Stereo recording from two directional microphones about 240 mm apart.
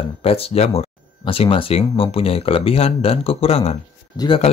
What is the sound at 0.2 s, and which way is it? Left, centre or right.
Speech, left.